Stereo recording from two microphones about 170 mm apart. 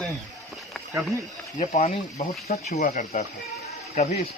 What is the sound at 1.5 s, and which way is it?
Speech, 40° left (ahead or behind).